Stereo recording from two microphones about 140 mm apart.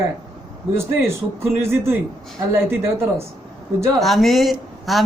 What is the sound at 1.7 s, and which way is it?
Speech, 15° right (ahead or behind).